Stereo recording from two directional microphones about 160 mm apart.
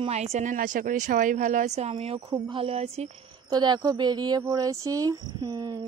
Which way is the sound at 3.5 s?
25° right (ahead or behind).